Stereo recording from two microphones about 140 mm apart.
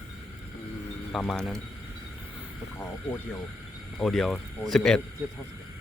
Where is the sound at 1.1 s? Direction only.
5° left (ahead or behind).